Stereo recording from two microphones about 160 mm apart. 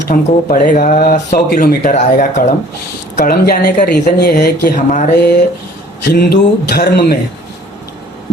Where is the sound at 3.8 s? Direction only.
90° left.